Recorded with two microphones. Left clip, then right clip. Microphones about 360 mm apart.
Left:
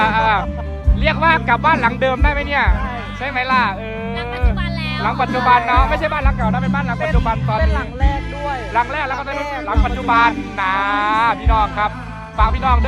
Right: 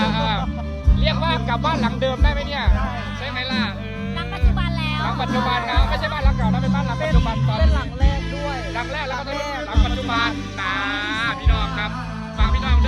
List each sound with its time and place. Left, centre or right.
0.0 s music: centre
1.0 s speech: centre
4.8 s music: centre
5.7 s speech: centre
8.4 s speech: centre